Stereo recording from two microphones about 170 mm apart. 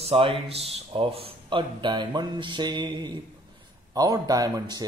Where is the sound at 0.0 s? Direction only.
35° right (ahead or behind).